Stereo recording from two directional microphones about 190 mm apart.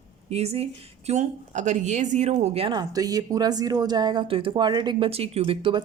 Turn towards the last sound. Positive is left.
turn(degrees=-30)  # may be behind; listen again after turning